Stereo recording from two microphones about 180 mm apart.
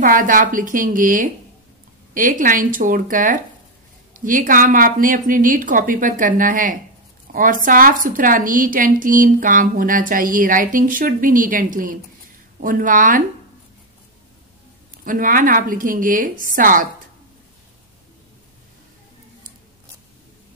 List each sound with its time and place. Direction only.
0.0 s a woman's voice: 50° right (ahead or behind)
15.0 s a woman's voice: 50° right (ahead or behind)